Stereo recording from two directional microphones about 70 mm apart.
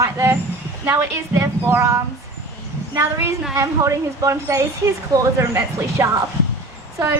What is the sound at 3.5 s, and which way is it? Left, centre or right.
A woman's voice, right.